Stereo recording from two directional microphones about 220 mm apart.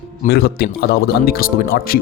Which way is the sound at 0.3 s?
45° left (ahead or behind).